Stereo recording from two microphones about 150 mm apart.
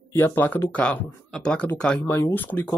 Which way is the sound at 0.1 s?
15° left (ahead or behind).